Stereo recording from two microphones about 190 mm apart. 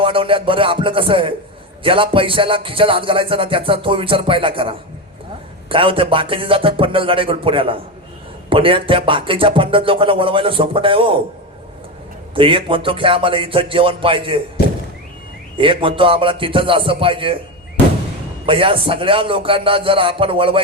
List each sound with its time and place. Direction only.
0.0 s speech: 30° right (ahead or behind)
12.3 s speech: 25° right (ahead or behind)
15.5 s speech: 25° right (ahead or behind)
18.4 s speech: 25° right (ahead or behind)